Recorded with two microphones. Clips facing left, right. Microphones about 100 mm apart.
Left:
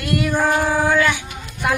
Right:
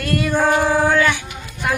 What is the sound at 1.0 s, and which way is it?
Speech, 15° left (ahead or behind).